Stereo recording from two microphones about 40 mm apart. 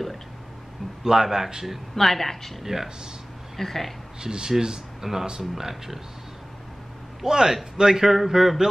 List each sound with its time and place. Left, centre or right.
1.0 s speech: centre
2.0 s a woman's voice: centre
2.6 s speech: centre
3.5 s speech: centre
4.2 s speech: centre
7.2 s speech: centre